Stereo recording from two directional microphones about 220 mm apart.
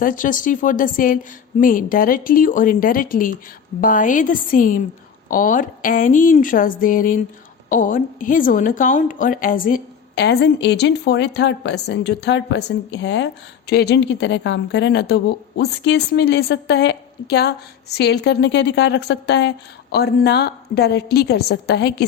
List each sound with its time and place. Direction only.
0.0 s a woman's voice: 40° left (ahead or behind)